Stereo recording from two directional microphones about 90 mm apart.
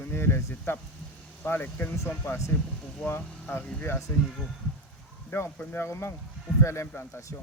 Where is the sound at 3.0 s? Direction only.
5° left (ahead or behind).